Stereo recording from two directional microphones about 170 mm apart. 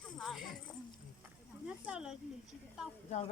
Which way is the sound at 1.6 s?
5° right (ahead or behind).